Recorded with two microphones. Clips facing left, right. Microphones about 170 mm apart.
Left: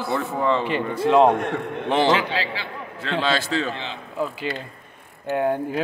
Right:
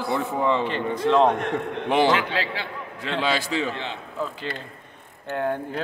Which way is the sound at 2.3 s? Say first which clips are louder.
Left 1 dB; 55° right (ahead or behind).